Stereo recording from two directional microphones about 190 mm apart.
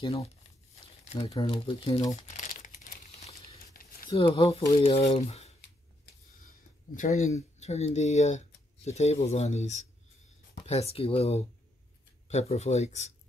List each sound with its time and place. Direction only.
1.2 s speech: 25° left (ahead or behind)
2.3 s crumpling: 40° left (ahead or behind)
4.1 s speech: 25° left (ahead or behind)
7.0 s speech: 40° left (ahead or behind)